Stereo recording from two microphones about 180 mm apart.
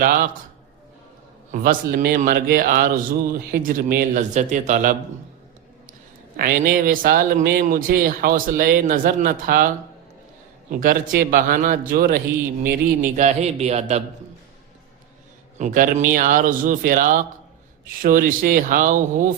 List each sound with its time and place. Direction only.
0.0 s speech: 50° right (ahead or behind)
1.5 s speech: 50° right (ahead or behind)
6.3 s speech: 55° right (ahead or behind)
10.7 s speech: 45° right (ahead or behind)
13.1 s a man's voice: 40° right (ahead or behind)
15.5 s speech: 45° right (ahead or behind)